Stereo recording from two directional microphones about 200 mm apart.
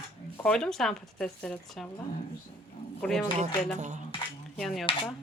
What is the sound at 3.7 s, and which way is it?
Cutlery, 35° right (ahead or behind).